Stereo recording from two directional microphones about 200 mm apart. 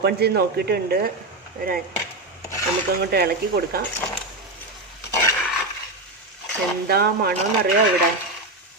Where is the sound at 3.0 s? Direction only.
50° right (ahead or behind).